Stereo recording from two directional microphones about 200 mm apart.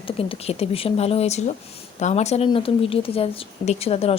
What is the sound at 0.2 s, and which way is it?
Speech, 30° left (ahead or behind).